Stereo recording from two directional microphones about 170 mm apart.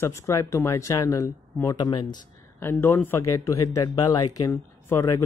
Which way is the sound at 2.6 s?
15° left (ahead or behind).